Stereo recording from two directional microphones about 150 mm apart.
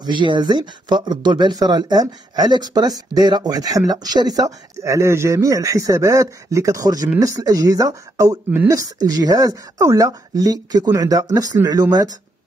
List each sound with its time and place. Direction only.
0.0 s speech: 30° right (ahead or behind)